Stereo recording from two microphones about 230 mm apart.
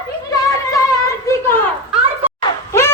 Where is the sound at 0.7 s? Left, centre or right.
Centre.